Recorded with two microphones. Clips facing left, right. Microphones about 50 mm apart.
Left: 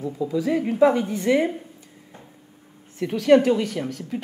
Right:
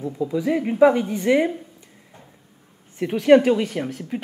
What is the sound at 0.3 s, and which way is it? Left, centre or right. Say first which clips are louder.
A woman's voice: even; centre.